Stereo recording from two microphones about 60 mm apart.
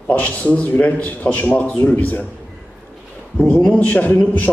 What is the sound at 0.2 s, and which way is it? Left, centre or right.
A man's voice, left.